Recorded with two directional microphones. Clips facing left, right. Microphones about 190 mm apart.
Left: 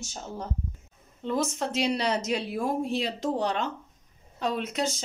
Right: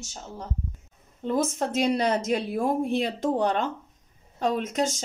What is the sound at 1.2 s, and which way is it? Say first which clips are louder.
Speech: right 3 dB; 50° right (ahead or behind).